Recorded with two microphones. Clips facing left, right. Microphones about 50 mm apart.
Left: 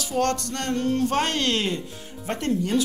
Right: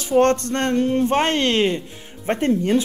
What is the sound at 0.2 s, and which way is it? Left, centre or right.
A woman's voice, right.